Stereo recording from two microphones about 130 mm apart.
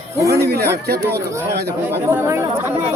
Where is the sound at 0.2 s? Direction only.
20° right (ahead or behind).